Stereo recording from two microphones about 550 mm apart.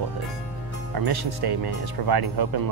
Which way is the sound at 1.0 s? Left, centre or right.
Right.